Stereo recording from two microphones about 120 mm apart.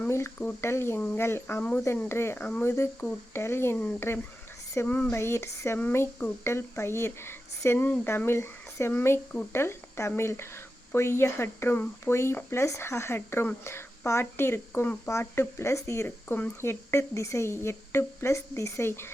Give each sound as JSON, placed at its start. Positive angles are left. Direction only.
{"t": 0.0, "sound": "speech", "side_deg": 20}